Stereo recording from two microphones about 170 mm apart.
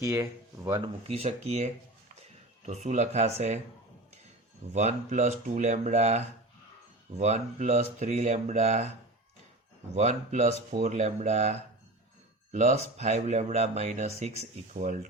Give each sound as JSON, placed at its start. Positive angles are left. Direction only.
{"t": 0.0, "sound": "speech", "side_deg": -20}
{"t": 1.0, "sound": "speech", "side_deg": -40}
{"t": 4.7, "sound": "speech", "side_deg": -45}
{"t": 9.9, "sound": "speech", "side_deg": -40}